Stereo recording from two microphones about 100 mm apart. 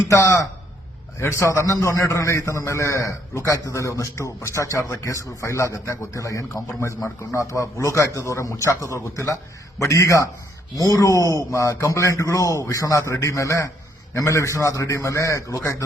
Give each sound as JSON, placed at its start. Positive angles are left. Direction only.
{"t": 0.1, "sound": "a man's voice", "side_deg": 30}